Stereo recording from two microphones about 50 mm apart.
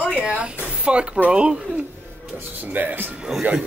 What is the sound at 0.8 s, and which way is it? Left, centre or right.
Speech, right.